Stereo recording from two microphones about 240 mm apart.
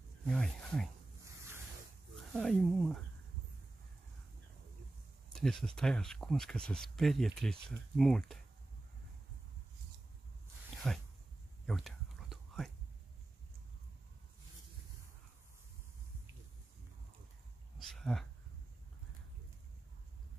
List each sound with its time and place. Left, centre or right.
0.3 s speech: centre
2.3 s speech: centre
5.3 s speech: centre
10.8 s speech: centre
11.6 s whispering: centre
17.7 s a sound: centre